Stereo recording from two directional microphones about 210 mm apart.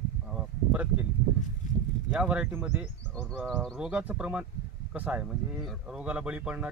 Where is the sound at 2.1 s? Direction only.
5° right (ahead or behind).